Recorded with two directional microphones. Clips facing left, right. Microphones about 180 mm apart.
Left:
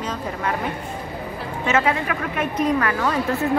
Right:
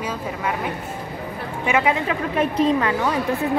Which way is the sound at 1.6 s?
15° right (ahead or behind).